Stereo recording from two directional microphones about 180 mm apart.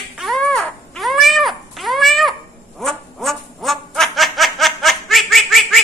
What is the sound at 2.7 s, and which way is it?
Frog, centre (ahead or behind).